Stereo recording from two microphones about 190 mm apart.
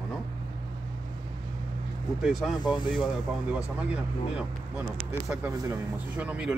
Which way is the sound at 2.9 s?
5° right (ahead or behind).